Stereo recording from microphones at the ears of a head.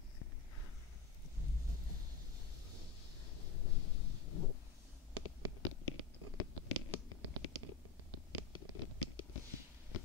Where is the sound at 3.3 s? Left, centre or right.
Left.